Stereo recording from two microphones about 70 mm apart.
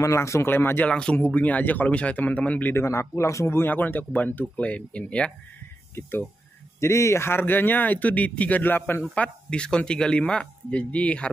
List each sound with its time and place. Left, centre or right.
0.0 s speech: left
0.5 s a man's voice: left
0.8 s speech: centre
2.7 s a man's voice: left
3.6 s speech: left
5.9 s a man's voice: left
6.8 s speech: left
9.1 s speech: centre